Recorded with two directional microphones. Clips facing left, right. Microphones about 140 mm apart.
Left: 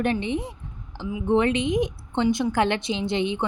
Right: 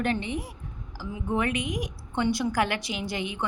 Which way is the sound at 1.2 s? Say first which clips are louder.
Left 7 dB; 25° left (ahead or behind).